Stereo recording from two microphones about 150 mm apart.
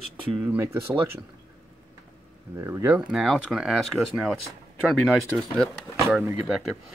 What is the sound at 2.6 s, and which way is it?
Speech, 20° right (ahead or behind).